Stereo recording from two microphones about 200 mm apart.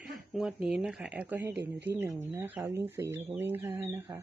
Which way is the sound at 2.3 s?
10° right (ahead or behind).